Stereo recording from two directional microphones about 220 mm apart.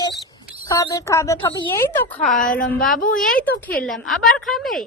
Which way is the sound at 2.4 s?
40° left (ahead or behind).